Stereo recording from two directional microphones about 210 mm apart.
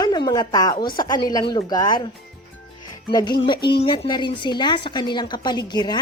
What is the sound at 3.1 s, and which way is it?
Speech, 20° left (ahead or behind).